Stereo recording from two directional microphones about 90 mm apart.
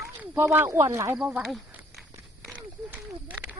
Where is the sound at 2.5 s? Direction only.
20° right (ahead or behind).